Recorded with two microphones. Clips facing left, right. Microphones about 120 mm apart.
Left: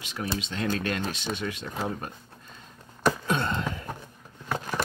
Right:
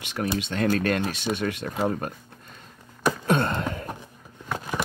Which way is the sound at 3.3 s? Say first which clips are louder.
Right 4 dB; 50° right (ahead or behind).